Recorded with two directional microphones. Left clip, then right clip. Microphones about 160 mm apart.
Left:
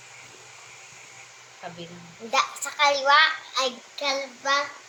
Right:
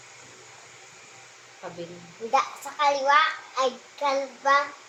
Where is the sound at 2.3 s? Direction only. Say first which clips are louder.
Even; 10° right (ahead or behind).